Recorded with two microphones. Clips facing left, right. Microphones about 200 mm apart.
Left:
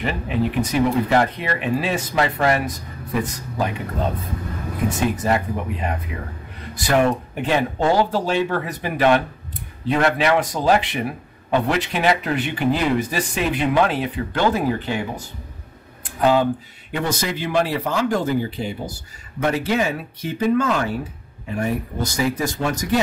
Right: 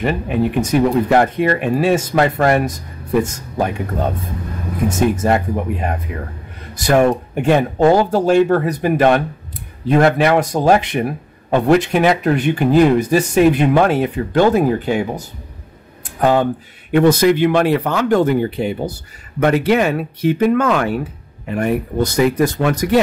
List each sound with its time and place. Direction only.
0.7 s speech: 50° right (ahead or behind)
4.8 s speech: 45° right (ahead or behind); by 22.9 s 60° right (ahead or behind)